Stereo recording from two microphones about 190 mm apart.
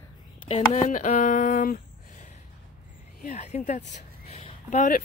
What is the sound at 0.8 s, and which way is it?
Speech, 40° left (ahead or behind).